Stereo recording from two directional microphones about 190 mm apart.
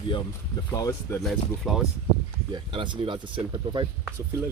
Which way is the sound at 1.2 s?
Centre (ahead or behind).